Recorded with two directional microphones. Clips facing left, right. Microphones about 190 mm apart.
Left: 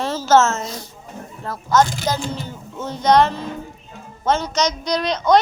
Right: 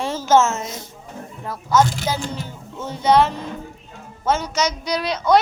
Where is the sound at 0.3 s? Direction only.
15° right (ahead or behind).